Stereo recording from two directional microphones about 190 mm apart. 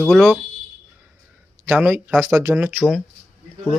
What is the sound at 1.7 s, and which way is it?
Speech, 10° right (ahead or behind).